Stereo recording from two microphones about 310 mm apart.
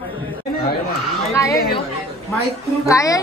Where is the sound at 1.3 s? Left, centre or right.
Centre.